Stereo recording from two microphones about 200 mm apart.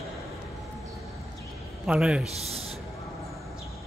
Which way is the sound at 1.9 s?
5° right (ahead or behind).